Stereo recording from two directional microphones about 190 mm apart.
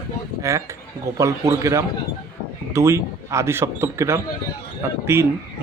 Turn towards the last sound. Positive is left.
turn(degrees=-15)  # may be behind; listen again after turning